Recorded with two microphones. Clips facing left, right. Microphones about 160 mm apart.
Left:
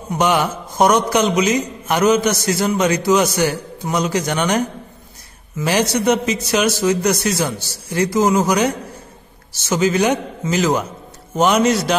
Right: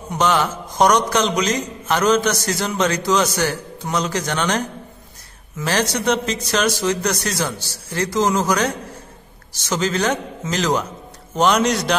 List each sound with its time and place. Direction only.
0.1 s a man's voice: 10° left (ahead or behind)